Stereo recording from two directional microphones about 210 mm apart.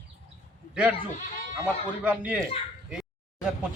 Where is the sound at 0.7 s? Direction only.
5° right (ahead or behind).